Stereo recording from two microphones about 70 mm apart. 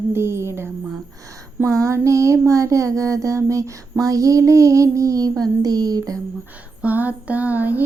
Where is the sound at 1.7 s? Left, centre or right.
Right.